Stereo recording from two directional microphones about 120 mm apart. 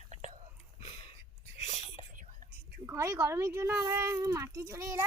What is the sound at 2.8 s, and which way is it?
Speech, 25° right (ahead or behind).